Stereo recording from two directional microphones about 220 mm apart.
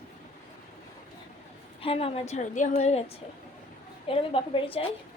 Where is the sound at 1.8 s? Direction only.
25° left (ahead or behind).